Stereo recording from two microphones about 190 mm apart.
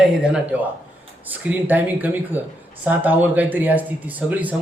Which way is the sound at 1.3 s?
10° right (ahead or behind).